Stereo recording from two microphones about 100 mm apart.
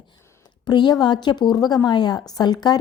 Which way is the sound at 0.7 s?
45° left (ahead or behind).